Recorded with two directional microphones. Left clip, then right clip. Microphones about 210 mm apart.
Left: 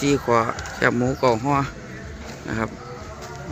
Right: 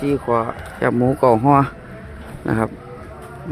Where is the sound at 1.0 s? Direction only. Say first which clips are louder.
Right 6 dB; 30° right (ahead or behind).